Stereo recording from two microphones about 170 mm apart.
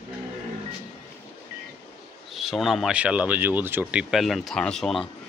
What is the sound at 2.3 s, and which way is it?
Speech, centre (ahead or behind).